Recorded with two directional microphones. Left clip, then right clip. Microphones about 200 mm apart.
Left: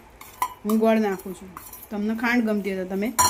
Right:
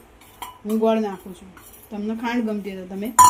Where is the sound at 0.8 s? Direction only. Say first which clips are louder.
Right 1 dB; 20° left (ahead or behind).